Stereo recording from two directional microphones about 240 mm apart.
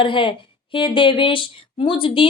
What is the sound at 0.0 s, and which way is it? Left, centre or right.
Speech, left.